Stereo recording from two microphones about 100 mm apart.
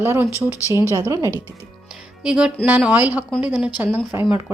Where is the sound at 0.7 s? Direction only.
30° left (ahead or behind).